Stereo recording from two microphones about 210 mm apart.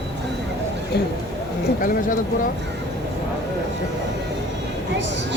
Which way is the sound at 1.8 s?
40° left (ahead or behind).